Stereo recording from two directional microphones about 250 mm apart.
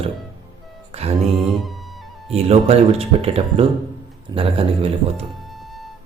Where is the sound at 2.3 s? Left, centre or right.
Right.